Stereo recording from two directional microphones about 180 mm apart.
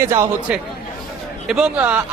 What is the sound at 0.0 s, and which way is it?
Speech, 15° right (ahead or behind).